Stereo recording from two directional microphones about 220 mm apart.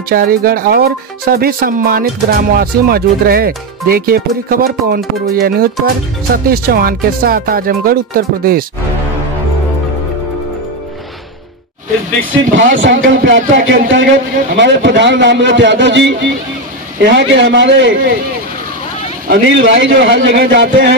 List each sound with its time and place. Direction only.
0.1 s speech: 40° right (ahead or behind)
12.7 s a man's voice: 60° right (ahead or behind)
14.1 s speech: 40° right (ahead or behind)
14.6 s a man's voice: 55° right (ahead or behind)
19.2 s a man's voice: 55° right (ahead or behind)